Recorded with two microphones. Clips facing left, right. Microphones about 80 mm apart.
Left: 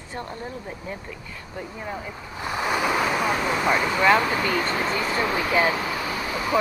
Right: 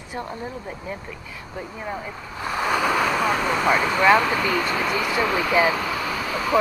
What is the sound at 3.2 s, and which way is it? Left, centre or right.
Speech, centre.